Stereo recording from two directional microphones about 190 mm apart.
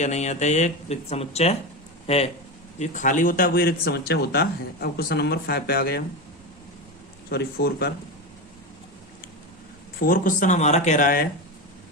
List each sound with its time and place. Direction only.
0.0 s speech: 35° left (ahead or behind); by 6.1 s 55° left (ahead or behind)
7.3 s speech: 55° left (ahead or behind)
10.0 s speech: 45° left (ahead or behind)